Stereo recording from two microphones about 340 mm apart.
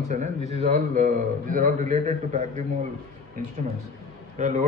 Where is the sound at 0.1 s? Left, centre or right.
Right.